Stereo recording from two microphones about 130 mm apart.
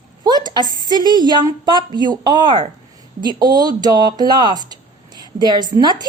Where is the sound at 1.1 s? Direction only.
35° right (ahead or behind).